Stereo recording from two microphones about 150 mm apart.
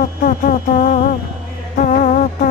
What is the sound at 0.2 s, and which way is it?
Music, 60° left (ahead or behind).